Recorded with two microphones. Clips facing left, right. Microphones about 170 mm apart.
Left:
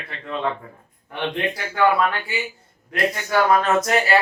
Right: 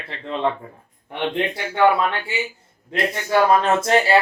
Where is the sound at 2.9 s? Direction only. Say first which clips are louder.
Right 1 dB; 25° right (ahead or behind).